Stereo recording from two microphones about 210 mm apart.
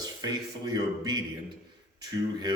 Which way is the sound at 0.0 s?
20° right (ahead or behind).